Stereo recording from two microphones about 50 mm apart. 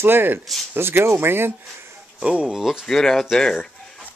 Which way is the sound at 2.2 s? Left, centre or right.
Right.